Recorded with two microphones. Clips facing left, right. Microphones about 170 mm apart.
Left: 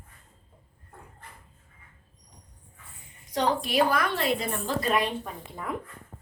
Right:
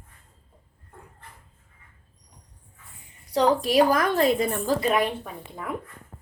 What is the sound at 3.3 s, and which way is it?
A woman's voice, 40° right (ahead or behind).